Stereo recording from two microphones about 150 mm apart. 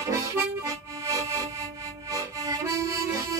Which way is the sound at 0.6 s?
20° right (ahead or behind).